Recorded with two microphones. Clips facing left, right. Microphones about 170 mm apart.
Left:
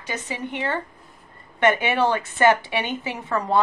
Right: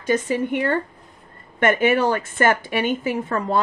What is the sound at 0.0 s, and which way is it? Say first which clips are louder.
A woman's voice: right 10 dB; 50° right (ahead or behind).